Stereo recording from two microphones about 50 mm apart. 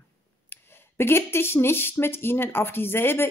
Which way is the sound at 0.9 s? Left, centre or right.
Left.